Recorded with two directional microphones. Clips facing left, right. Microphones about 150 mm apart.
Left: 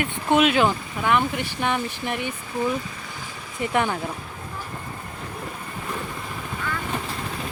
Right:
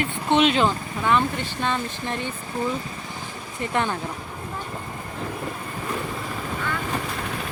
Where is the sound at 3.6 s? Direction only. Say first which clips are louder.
Left 2 dB; 15° left (ahead or behind).